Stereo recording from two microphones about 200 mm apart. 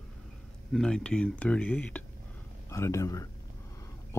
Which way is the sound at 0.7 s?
5° left (ahead or behind).